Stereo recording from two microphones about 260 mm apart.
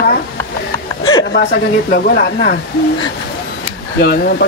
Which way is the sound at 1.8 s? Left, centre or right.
Left.